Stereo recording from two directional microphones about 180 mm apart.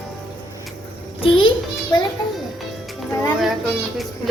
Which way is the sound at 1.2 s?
30° left (ahead or behind).